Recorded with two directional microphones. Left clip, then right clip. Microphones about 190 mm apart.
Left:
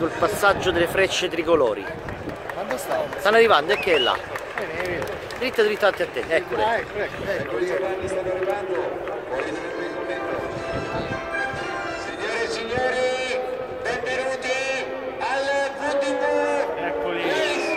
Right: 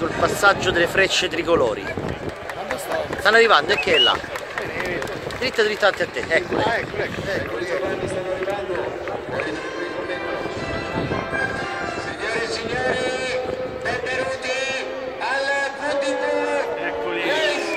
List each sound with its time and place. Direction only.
0.2 s speech: 5° left (ahead or behind)
3.3 s speech: 10° left (ahead or behind)
5.4 s speech: 10° left (ahead or behind)
6.6 s speech: 35° left (ahead or behind)
16.8 s music: 50° left (ahead or behind)